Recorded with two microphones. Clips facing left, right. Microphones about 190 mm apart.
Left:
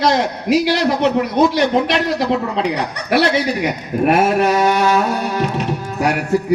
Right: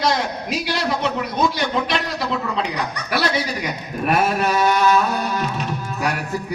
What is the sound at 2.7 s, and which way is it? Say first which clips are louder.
Mantra: left 7 dB; 25° left (ahead or behind).